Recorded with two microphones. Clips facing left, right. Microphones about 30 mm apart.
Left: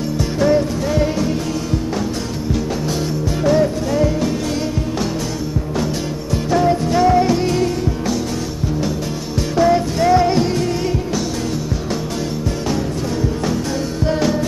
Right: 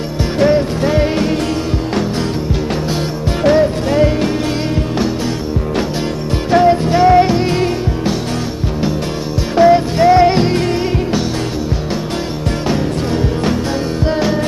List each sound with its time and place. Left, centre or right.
0.4 s music: right
3.5 s music: right
6.5 s music: right
9.6 s music: right